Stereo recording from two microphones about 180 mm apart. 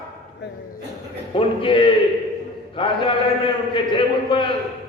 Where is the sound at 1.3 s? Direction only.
30° left (ahead or behind).